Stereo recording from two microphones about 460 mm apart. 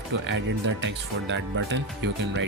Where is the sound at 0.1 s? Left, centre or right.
Right.